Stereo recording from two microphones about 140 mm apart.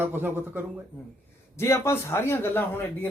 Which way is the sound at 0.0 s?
15° right (ahead or behind).